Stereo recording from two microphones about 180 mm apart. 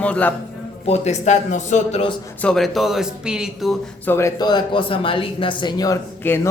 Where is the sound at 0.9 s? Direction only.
40° left (ahead or behind).